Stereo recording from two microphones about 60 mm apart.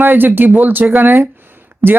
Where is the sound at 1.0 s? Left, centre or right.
Right.